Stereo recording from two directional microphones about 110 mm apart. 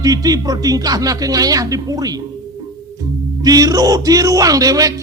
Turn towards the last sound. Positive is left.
turn(degrees=-35)  # may be behind; listen again after turning